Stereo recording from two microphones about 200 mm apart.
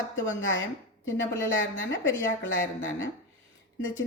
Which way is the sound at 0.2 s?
70° left (ahead or behind).